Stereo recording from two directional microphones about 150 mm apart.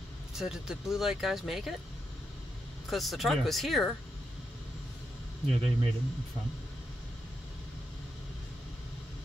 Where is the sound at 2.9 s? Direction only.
Centre (ahead or behind).